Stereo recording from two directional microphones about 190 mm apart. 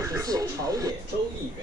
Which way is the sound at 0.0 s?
15° right (ahead or behind).